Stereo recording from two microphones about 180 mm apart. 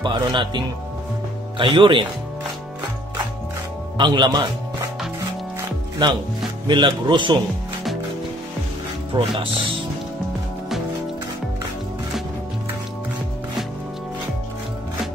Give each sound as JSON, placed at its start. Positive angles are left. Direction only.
{"t": 0.0, "sound": "speech", "side_deg": -25}
{"t": 1.6, "sound": "speech", "side_deg": -30}
{"t": 4.0, "sound": "speech", "side_deg": -25}
{"t": 5.6, "sound": "music", "side_deg": -25}
{"t": 6.7, "sound": "speech", "side_deg": -25}
{"t": 9.1, "sound": "speech", "side_deg": -25}